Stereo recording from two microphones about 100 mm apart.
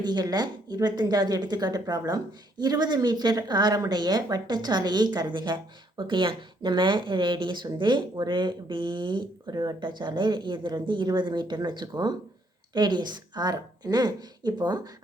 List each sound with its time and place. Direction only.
0.0 s speech: 45° right (ahead or behind)